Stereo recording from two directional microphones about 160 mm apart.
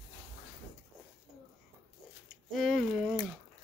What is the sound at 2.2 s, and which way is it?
Speech, centre (ahead or behind).